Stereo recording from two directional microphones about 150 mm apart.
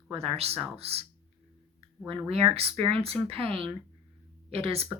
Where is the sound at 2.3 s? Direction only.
40° right (ahead or behind).